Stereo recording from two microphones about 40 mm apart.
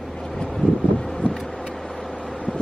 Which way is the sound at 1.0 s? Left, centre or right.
Centre.